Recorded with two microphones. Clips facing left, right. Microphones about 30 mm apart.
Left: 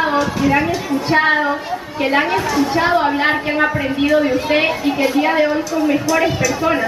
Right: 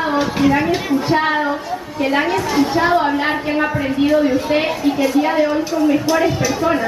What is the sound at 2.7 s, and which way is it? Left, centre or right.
A woman's voice, centre.